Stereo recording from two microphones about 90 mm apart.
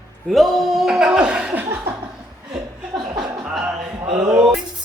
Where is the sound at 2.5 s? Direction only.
55° right (ahead or behind).